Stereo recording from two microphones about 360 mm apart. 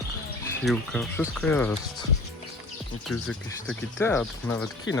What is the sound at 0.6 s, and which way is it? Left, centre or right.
Speech, centre.